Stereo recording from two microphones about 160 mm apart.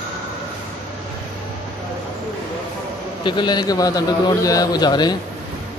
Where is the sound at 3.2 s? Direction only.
30° left (ahead or behind).